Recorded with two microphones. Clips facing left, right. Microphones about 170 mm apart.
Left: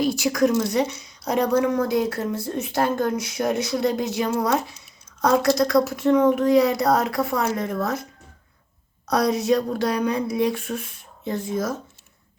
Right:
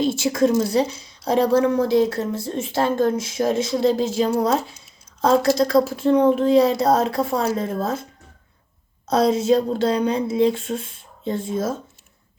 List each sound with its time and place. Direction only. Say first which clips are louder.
0.0 s a woman's voice: right 1 dB; 25° right (ahead or behind)
9.0 s a woman's voice: right 3 dB; 25° right (ahead or behind)